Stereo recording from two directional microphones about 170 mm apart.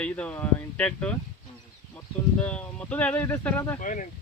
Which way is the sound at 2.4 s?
5° left (ahead or behind).